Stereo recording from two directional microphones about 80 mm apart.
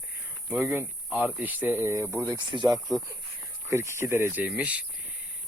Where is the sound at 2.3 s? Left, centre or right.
Right.